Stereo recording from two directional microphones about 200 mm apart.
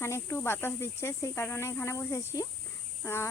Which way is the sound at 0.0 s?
10° left (ahead or behind).